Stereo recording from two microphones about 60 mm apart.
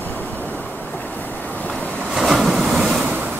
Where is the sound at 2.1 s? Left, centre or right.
Centre.